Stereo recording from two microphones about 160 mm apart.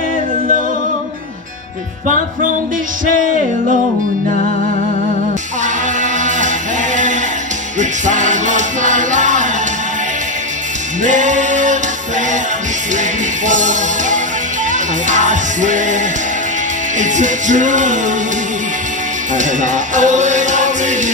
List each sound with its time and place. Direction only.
7.8 s music: 50° right (ahead or behind)
11.0 s music: 50° right (ahead or behind)
13.5 s music: 50° right (ahead or behind)
17.0 s music: 50° right (ahead or behind)
19.3 s music: 50° right (ahead or behind)